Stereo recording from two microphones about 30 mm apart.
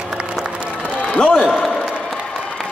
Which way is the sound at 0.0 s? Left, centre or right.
Right.